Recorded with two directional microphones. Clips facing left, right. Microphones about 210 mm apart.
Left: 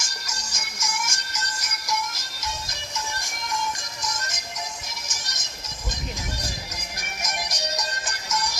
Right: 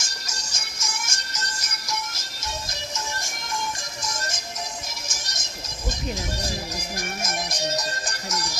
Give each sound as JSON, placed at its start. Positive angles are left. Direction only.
{"t": 0.0, "sound": "music", "side_deg": -25}
{"t": 4.0, "sound": "music", "side_deg": -30}
{"t": 7.2, "sound": "music", "side_deg": -25}
{"t": 8.0, "sound": "music", "side_deg": -40}